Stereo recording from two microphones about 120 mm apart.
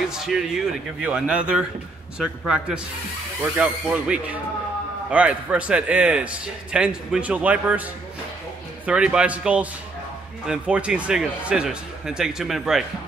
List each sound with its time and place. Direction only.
0.2 s a man's voice: 5° right (ahead or behind)
8.8 s a man's voice: 10° right (ahead or behind)